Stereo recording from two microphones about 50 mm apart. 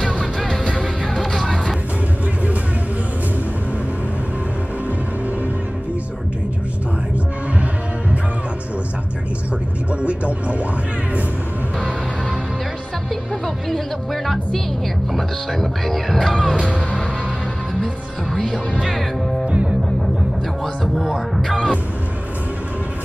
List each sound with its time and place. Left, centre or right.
0.0 s music: centre
10.0 s music: right
13.7 s music: centre
19.4 s music: right
20.6 s music: centre